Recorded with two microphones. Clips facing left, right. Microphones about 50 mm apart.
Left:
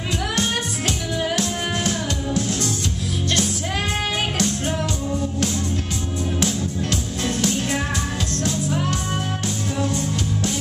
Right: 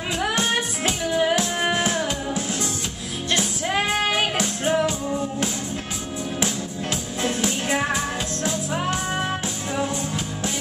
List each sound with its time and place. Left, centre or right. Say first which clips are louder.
0.2 s music: right 3 dB; centre